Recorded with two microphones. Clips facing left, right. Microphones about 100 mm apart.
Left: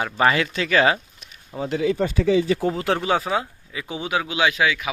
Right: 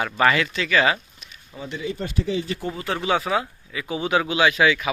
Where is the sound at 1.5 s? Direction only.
85° left.